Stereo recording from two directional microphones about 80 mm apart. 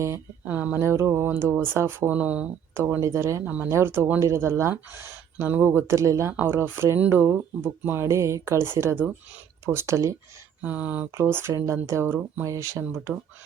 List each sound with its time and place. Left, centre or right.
0.4 s speech: right
0.8 s speech: right
2.1 s speech: centre
3.0 s speech: right
6.3 s speech: right
7.0 s speech: centre
8.0 s speech: right
10.6 s speech: centre
11.1 s speech: right